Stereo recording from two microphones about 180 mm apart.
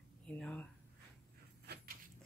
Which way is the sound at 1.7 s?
65° right (ahead or behind).